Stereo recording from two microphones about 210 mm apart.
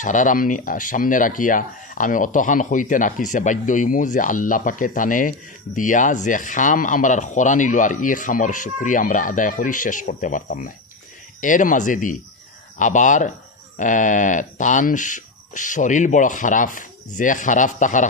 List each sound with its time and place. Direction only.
0.0 s speech: 40° left (ahead or behind)